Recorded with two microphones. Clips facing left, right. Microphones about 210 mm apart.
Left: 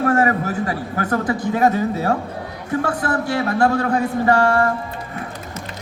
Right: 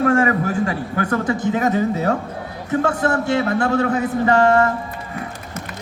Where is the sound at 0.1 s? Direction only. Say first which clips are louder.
Right 1 dB; 40° left (ahead or behind).